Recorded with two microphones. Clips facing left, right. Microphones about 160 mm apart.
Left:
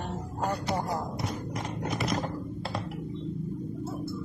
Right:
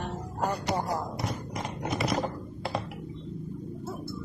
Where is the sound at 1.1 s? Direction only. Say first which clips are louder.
Even; centre (ahead or behind).